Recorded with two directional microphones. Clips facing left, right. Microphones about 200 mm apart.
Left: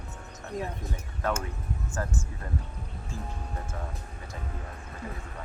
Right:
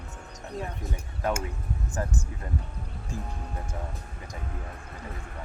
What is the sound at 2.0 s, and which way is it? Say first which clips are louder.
Speech: right 2 dB; 15° right (ahead or behind).